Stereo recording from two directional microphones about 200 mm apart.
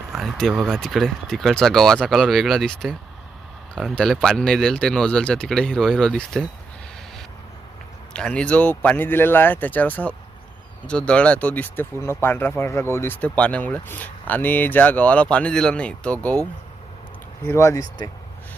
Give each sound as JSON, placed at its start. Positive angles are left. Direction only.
{"t": 0.1, "sound": "speech", "side_deg": 0}
{"t": 8.1, "sound": "speech", "side_deg": 5}
{"t": 17.4, "sound": "speech", "side_deg": 15}